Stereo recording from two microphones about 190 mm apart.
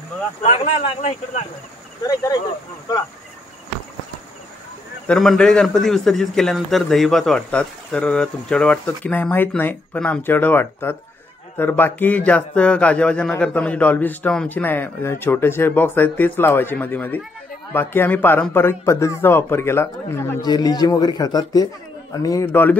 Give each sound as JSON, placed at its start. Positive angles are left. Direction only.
{"t": 0.4, "sound": "speech", "side_deg": 35}
{"t": 5.0, "sound": "a man's voice", "side_deg": 0}